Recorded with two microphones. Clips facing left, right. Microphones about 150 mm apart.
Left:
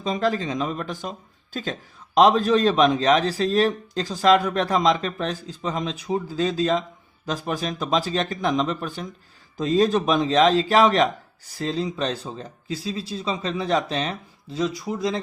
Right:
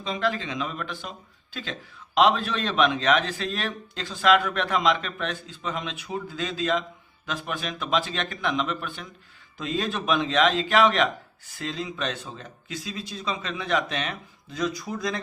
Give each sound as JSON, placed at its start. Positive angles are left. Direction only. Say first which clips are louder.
{"t": 0.0, "sound": "a man's voice", "louder": "left 4 dB", "side_deg": 40}